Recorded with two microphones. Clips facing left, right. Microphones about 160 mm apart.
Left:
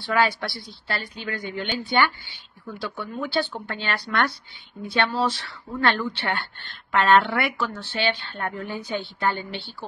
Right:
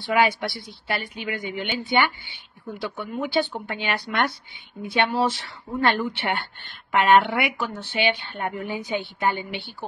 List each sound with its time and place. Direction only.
0.0 s speech: 20° right (ahead or behind)